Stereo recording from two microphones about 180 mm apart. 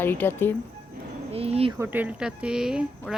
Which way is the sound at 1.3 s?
35° right (ahead or behind).